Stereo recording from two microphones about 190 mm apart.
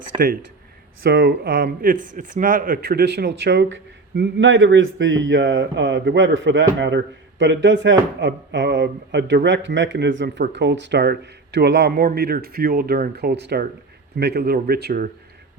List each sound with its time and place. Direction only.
0.1 s speech: 25° right (ahead or behind)
1.0 s speech: 55° right (ahead or behind)